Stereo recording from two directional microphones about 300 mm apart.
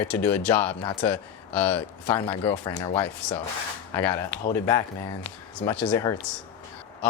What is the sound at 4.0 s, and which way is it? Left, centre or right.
Speech, centre.